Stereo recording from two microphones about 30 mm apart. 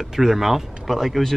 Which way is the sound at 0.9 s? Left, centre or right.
Centre.